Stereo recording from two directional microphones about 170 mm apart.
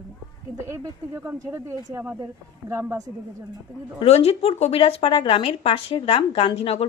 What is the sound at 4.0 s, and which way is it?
Speech, 35° left (ahead or behind).